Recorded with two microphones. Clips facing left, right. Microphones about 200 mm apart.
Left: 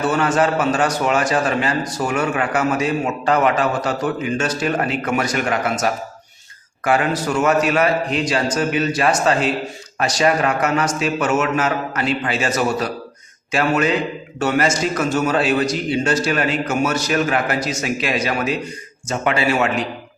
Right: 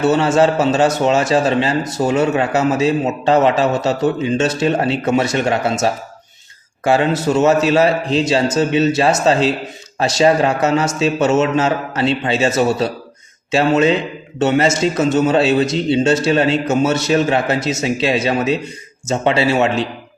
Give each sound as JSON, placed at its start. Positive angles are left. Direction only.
{"t": 0.0, "sound": "a man's voice", "side_deg": -25}